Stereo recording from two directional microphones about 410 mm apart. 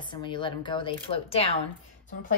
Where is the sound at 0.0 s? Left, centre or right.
Centre.